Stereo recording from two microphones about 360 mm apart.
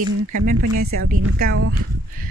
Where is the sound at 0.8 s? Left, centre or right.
Right.